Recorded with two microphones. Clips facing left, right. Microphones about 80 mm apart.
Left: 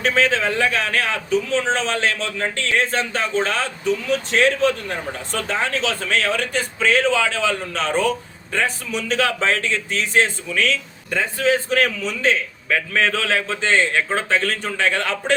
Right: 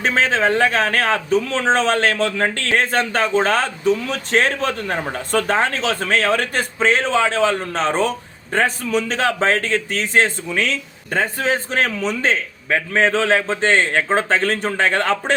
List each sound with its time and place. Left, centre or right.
0.0 s a man's voice: right
6.7 s a man's voice: right